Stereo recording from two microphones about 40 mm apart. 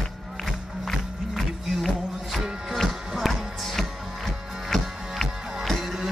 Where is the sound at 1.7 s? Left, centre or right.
Centre.